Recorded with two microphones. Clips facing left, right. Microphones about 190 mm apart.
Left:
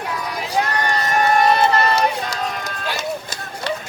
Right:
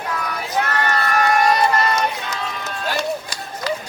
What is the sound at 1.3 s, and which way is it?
Run, 30° left (ahead or behind).